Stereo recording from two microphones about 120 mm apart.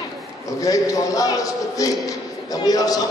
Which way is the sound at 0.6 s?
30° left (ahead or behind).